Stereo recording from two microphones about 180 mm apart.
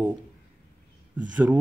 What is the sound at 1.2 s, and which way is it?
Speech, 10° right (ahead or behind).